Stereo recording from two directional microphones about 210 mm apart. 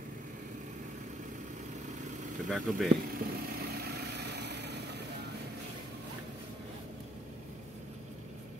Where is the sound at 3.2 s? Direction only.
45° right (ahead or behind).